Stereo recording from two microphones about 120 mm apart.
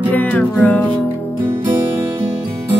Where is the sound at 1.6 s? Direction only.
20° right (ahead or behind).